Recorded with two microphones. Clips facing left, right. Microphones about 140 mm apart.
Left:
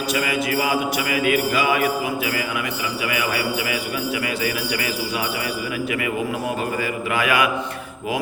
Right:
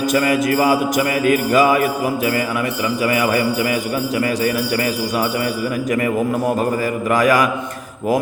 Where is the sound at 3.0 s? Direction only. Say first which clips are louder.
Right 7 dB; 40° right (ahead or behind).